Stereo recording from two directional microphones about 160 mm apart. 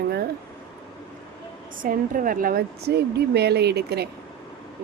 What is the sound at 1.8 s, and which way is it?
A woman's voice, 60° right (ahead or behind).